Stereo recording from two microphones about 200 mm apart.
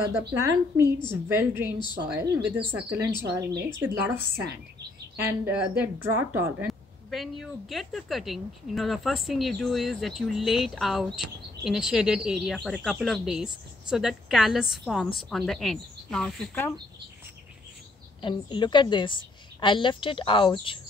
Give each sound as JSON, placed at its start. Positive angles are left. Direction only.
{"t": 0.3, "sound": "speech", "side_deg": -15}
{"t": 6.7, "sound": "speech", "side_deg": 0}
{"t": 18.2, "sound": "a woman's voice", "side_deg": 25}